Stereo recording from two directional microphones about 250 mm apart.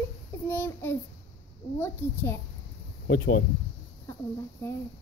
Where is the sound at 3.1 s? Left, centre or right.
Left.